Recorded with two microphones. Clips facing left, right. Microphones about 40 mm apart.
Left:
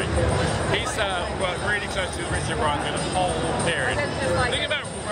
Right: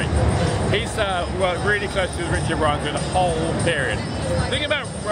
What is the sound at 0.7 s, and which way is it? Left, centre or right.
Speech, centre.